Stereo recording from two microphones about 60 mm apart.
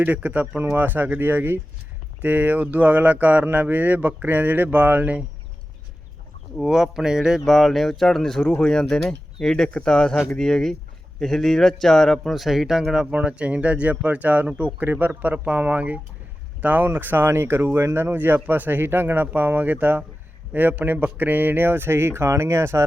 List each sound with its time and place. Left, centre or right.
0.0 s speech: right
0.6 s speech: right
6.6 s speech: centre
7.4 s speech: centre; by 22.9 s right